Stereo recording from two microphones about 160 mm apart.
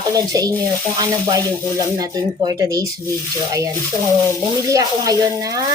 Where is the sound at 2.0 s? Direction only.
25° right (ahead or behind).